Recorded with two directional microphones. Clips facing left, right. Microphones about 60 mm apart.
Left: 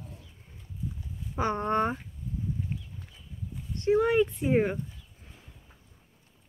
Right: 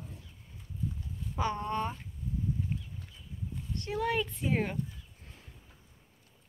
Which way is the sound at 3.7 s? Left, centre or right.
Left.